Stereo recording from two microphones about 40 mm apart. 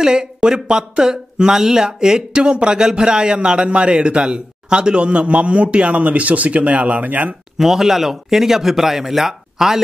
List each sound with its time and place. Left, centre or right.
0.0 s speech: centre; by 7.3 s right
7.5 s speech: centre